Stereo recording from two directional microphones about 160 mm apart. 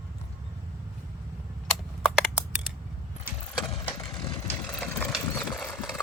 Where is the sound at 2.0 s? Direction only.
5° left (ahead or behind).